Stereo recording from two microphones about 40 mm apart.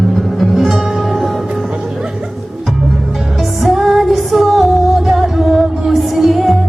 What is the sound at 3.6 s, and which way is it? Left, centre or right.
Music, centre.